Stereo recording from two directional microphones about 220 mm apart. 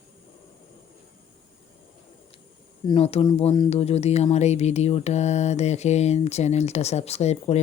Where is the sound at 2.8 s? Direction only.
25° left (ahead or behind).